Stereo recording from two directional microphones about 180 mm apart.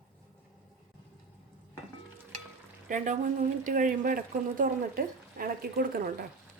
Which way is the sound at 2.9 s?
45° right (ahead or behind).